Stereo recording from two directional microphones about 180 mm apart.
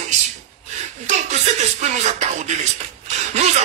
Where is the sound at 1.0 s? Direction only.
40° right (ahead or behind).